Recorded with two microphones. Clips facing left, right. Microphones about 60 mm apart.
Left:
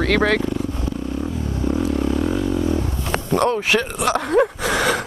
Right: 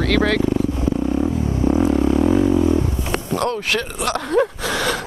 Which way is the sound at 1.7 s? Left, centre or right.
Right.